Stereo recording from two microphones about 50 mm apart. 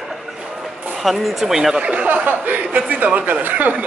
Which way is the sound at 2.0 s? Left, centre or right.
Right.